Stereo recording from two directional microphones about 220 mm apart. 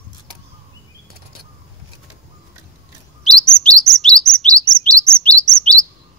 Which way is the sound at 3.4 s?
5° left (ahead or behind).